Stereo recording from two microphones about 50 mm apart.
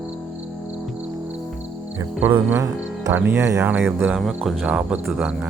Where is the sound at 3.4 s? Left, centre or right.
Right.